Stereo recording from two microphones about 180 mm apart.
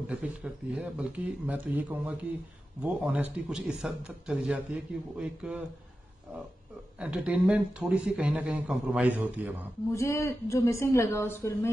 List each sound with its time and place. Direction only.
0.1 s a man's voice: 5° right (ahead or behind)
7.0 s a man's voice: 5° right (ahead or behind)
9.9 s a woman's voice: 15° left (ahead or behind)